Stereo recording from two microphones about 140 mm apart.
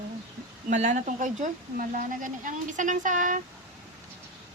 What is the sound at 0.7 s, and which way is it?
Speech, 60° right (ahead or behind).